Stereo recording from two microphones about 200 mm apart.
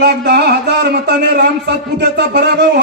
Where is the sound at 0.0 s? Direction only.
55° right (ahead or behind).